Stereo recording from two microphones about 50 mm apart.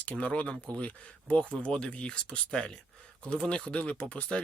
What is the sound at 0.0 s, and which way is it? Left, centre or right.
Speech, left.